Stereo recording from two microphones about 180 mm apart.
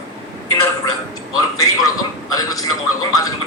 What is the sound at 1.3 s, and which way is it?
A man's voice, 20° left (ahead or behind).